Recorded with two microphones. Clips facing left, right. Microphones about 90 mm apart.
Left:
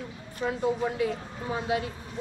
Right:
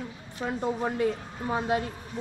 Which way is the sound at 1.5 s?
40° right (ahead or behind).